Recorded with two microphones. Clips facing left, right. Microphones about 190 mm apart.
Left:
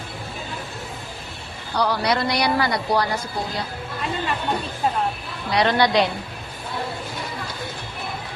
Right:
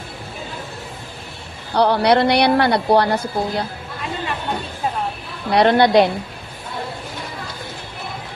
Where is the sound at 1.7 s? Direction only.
60° right (ahead or behind).